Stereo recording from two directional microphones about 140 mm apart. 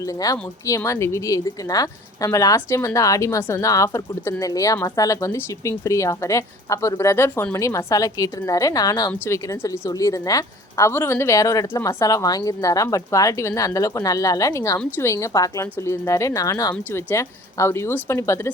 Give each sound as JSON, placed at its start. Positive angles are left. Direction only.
{"t": 0.0, "sound": "speech", "side_deg": 25}